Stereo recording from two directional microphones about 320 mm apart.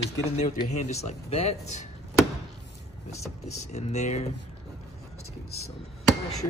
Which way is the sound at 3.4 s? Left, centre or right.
Left.